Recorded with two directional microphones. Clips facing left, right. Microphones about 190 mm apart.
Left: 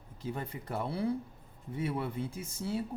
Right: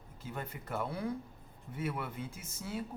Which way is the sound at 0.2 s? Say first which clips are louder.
Left 4 dB; 30° left (ahead or behind).